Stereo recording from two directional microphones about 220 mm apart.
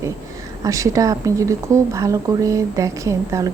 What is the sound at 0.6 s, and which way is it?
A woman's voice, 15° right (ahead or behind).